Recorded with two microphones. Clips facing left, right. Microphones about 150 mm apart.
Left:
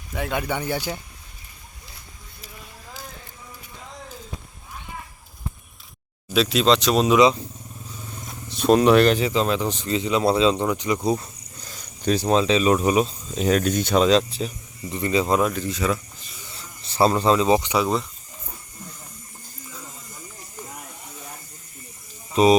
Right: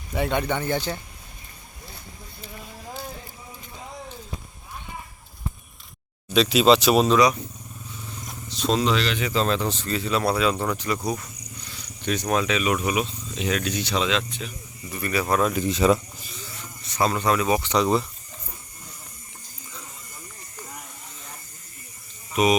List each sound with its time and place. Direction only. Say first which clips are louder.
0.1 s speech: right 2 dB; centre (ahead or behind)
6.2 s speech: right 1 dB; centre (ahead or behind)
8.4 s speech: left 7 dB; 55° left (ahead or behind)
9.3 s speech: left 1 dB; 15° left (ahead or behind)
11.6 s speech: left 6 dB; 40° left (ahead or behind)
14.9 s speech: left 3 dB; 20° left (ahead or behind)
15.5 s speech: right 5 dB; 20° right (ahead or behind)
16.5 s a sound: right 1 dB; 30° left (ahead or behind)
17.7 s speech: right 1 dB; centre (ahead or behind)
22.3 s electric shaver: left 4 dB; 30° left (ahead or behind)